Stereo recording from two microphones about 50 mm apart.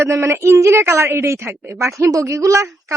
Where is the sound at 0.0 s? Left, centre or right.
Right.